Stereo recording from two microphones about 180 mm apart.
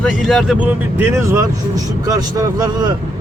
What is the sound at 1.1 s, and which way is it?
Speech, 15° right (ahead or behind).